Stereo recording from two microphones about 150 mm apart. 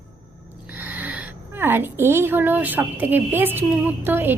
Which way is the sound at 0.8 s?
10° right (ahead or behind).